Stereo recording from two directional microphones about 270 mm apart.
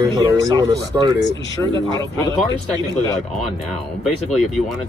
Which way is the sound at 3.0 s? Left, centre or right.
Centre.